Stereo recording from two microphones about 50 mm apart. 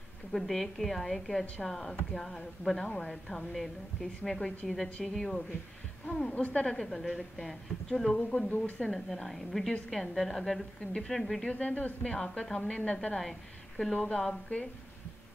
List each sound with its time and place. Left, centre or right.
0.3 s a woman's voice: centre
8.2 s a woman's voice: centre
8.5 s speech: left
8.9 s a woman's voice: centre
10.9 s a woman's voice: centre
11.1 s a woman's voice: centre
11.4 s a woman's voice: left; by 13.9 s centre
13.9 s speech: left